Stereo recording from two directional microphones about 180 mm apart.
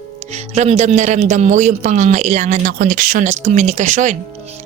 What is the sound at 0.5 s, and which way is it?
Music, 40° right (ahead or behind).